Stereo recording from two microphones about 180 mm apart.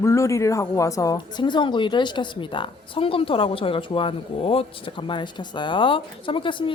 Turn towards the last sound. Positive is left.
turn(degrees=30)  # may be behind; listen again after turning